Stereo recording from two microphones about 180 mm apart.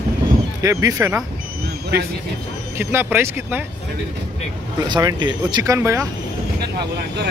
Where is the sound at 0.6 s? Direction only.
20° right (ahead or behind).